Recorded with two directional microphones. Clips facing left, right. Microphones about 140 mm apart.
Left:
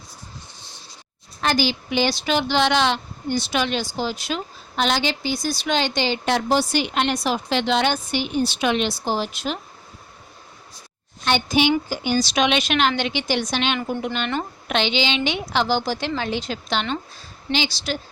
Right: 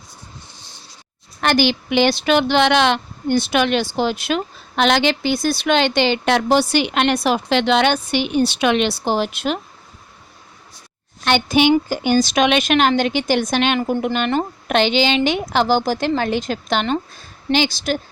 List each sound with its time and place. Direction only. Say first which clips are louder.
1.4 s speech: right 5 dB; 65° right (ahead or behind)
11.3 s a woman's voice: right 4 dB; 65° right (ahead or behind)